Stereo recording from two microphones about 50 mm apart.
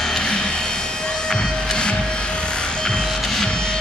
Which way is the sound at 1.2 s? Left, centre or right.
Centre.